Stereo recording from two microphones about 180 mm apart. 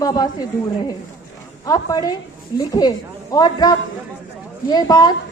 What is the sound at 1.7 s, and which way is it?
A child's voice, 20° left (ahead or behind).